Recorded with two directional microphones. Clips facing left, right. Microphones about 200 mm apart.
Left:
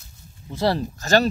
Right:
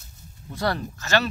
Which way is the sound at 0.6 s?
30° left (ahead or behind).